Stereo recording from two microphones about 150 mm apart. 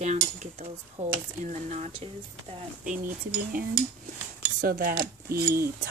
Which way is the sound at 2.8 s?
65° right (ahead or behind).